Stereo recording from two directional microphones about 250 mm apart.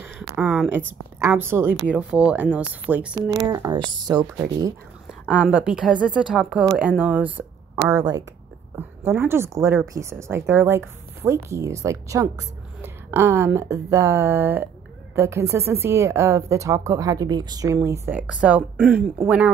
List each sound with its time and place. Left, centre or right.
0.4 s speech: centre